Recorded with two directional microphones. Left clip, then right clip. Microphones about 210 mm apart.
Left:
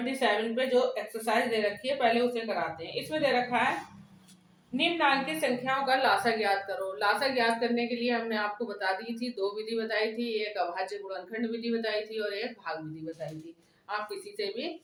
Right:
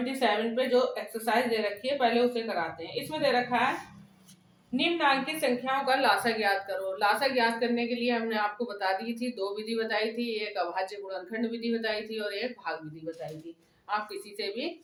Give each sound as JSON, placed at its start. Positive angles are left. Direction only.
{"t": 0.1, "sound": "a woman's voice", "side_deg": -15}
{"t": 4.8, "sound": "a woman's voice", "side_deg": -10}
{"t": 14.3, "sound": "a woman's voice", "side_deg": -15}